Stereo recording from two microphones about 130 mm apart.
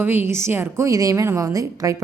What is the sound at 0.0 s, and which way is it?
A woman's voice, 15° right (ahead or behind).